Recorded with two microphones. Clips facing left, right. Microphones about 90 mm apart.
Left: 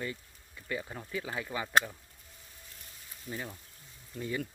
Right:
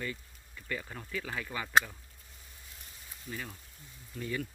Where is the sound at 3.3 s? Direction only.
20° left (ahead or behind).